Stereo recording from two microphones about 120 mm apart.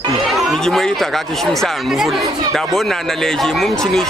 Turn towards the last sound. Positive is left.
turn(degrees=5)  # may be behind; listen again after turning